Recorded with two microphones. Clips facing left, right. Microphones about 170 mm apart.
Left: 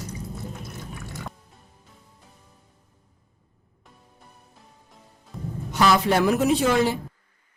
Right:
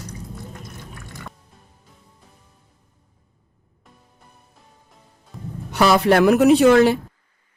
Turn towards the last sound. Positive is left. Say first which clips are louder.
# right 8 dB
turn(degrees=-70)  # may be behind; listen again after turning